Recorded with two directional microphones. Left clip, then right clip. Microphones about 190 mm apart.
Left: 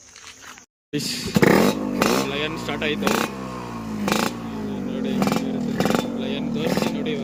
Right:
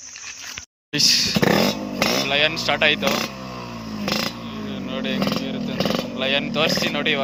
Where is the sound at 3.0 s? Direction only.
30° left (ahead or behind).